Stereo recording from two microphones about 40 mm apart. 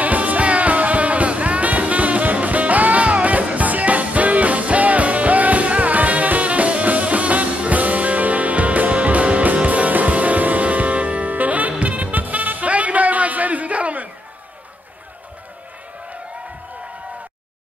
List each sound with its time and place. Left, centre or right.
0.0 s music: right